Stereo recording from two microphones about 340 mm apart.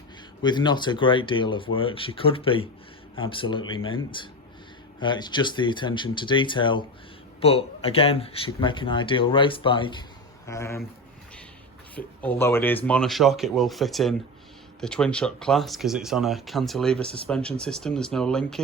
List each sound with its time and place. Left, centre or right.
0.4 s speech: centre
11.9 s speech: centre